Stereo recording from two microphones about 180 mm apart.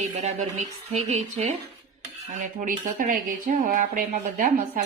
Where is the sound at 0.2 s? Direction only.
40° right (ahead or behind).